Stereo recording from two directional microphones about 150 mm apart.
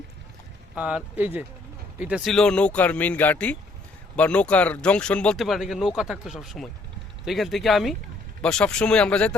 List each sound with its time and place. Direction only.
0.8 s speech: 5° right (ahead or behind); by 9.3 s 10° left (ahead or behind)